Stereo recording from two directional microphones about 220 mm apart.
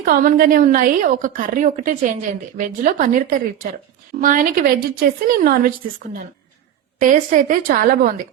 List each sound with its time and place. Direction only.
0.0 s a woman's voice: 40° right (ahead or behind)